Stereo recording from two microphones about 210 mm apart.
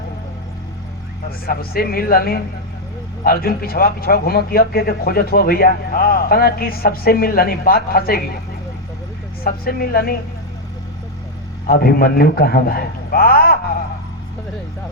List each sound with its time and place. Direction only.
1.5 s a man's voice: 45° left (ahead or behind)
9.4 s a man's voice: 45° left (ahead or behind)
11.6 s a man's voice: 45° left (ahead or behind)